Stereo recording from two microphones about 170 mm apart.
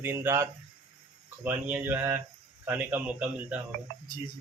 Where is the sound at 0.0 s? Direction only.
15° right (ahead or behind).